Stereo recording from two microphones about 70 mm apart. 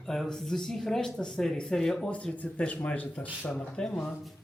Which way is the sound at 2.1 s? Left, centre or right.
Centre.